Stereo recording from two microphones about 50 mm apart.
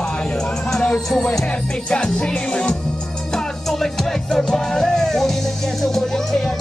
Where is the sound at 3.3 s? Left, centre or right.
Centre.